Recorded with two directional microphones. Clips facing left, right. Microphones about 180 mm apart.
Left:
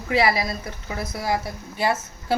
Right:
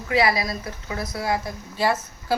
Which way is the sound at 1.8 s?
20° left (ahead or behind).